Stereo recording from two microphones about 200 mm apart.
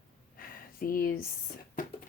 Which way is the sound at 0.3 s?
45° left (ahead or behind).